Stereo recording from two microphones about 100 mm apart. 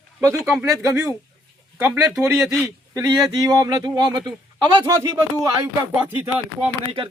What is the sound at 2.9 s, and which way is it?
Speech, 35° right (ahead or behind).